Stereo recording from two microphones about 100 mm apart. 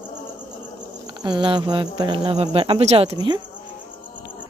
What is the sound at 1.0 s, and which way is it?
Speech, 45° right (ahead or behind).